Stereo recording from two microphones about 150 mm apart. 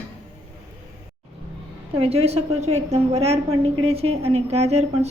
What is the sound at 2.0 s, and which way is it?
A woman's voice, 45° right (ahead or behind).